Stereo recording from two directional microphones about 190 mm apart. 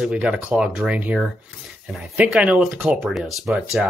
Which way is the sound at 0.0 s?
5° right (ahead or behind).